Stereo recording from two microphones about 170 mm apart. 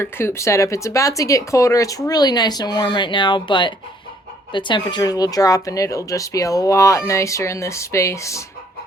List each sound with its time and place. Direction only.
0.0 s speech: 15° left (ahead or behind)